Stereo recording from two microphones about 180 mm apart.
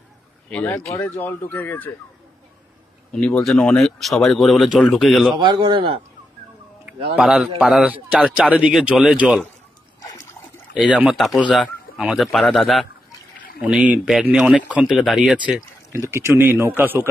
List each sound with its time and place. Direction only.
0.5 s speech: 10° left (ahead or behind)
3.1 s speech: 5° left (ahead or behind)
5.4 s speech: 25° right (ahead or behind)
7.2 s speech: centre (ahead or behind)
10.9 s speech: 5° right (ahead or behind)
15.9 s a man's voice: 15° right (ahead or behind)